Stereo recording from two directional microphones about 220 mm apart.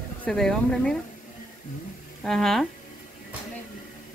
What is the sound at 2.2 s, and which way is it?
Speech, centre (ahead or behind).